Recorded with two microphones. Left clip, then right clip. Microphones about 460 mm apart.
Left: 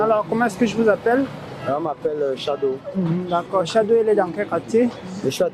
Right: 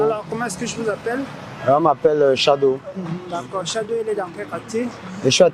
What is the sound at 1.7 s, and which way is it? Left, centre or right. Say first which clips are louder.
Speech: right 8 dB; right.